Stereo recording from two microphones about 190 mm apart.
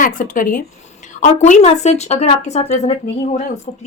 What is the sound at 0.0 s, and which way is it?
A woman's voice, 45° left (ahead or behind).